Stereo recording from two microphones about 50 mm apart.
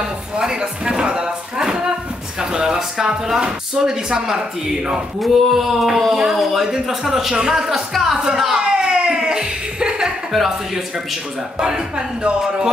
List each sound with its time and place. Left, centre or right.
0.4 s a sound: centre
2.5 s speech: centre
7.9 s music: centre
11.6 s speech: centre